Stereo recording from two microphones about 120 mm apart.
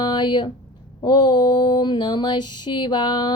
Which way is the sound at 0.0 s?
40° left (ahead or behind).